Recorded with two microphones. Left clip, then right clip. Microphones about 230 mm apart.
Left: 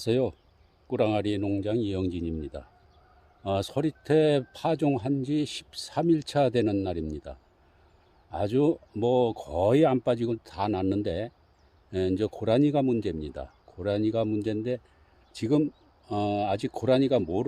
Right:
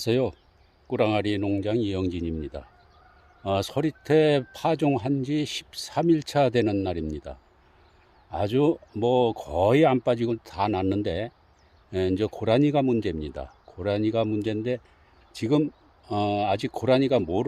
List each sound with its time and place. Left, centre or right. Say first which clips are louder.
0.0 s speech: right 2 dB; centre